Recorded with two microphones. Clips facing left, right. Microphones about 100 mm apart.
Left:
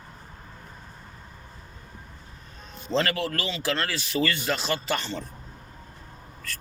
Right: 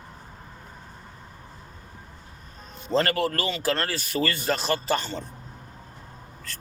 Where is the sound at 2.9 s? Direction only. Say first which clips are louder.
Right 2 dB; 45° right (ahead or behind).